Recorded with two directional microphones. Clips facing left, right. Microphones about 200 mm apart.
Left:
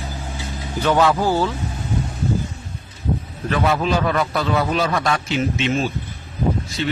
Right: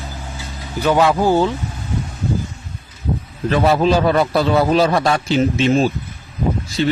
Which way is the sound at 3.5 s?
35° right (ahead or behind).